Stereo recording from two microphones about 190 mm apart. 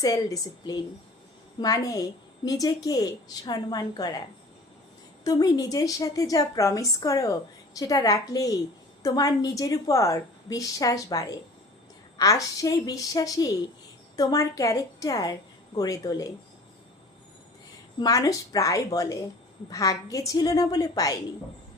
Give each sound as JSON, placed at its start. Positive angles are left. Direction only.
{"t": 0.0, "sound": "a woman's voice", "side_deg": 20}
{"t": 5.2, "sound": "a woman's voice", "side_deg": 20}
{"t": 18.0, "sound": "a woman's voice", "side_deg": 20}